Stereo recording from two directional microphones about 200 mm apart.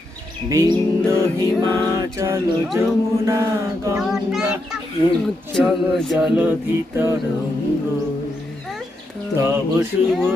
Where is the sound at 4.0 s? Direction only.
Centre (ahead or behind).